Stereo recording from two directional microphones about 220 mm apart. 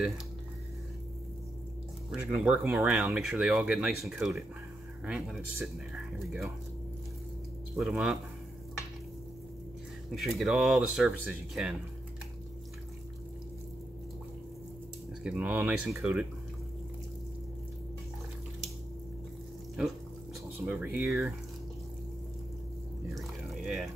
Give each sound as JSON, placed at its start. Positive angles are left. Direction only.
{"t": 2.0, "sound": "speech", "side_deg": -5}
{"t": 7.7, "sound": "speech", "side_deg": -5}
{"t": 10.1, "sound": "speech", "side_deg": 0}
{"t": 15.2, "sound": "speech", "side_deg": -5}
{"t": 20.6, "sound": "speech", "side_deg": -5}
{"t": 23.1, "sound": "a sound", "side_deg": 0}